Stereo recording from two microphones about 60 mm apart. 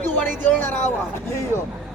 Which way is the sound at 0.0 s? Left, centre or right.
Left.